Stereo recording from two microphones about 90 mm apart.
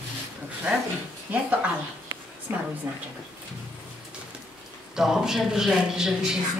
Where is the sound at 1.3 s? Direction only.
20° right (ahead or behind).